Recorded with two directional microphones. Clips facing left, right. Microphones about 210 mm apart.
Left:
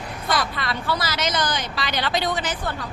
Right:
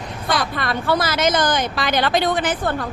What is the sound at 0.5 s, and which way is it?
A woman's voice, 50° right (ahead or behind).